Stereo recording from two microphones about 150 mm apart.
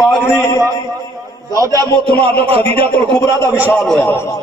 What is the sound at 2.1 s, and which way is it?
Speech, 40° right (ahead or behind).